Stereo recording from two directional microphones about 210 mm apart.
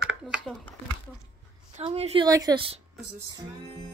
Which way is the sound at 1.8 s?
30° right (ahead or behind).